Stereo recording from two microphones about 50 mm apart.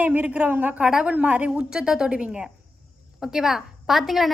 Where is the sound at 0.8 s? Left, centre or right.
Centre.